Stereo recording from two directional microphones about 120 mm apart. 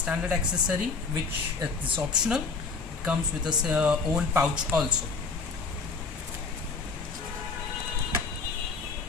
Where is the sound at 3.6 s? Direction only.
10° right (ahead or behind).